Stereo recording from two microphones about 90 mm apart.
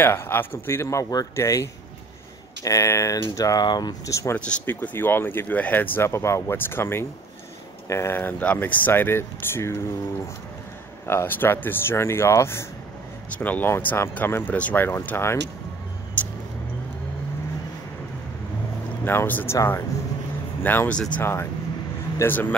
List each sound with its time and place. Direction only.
0.0 s speech: 25° left (ahead or behind); by 4.1 s 50° left (ahead or behind)
4.1 s speech: 35° left (ahead or behind)
4.5 s speech: 15° left (ahead or behind)
11.1 s speech: 25° left (ahead or behind)
13.4 s speech: 20° left (ahead or behind)
19.0 s speech: 20° left (ahead or behind)